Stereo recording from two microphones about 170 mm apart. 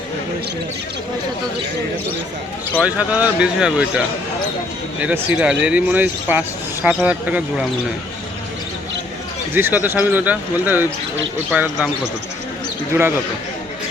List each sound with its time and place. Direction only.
2.8 s speech: 5° right (ahead or behind)
9.6 s speech: 10° right (ahead or behind)
12.9 s speech: 10° right (ahead or behind)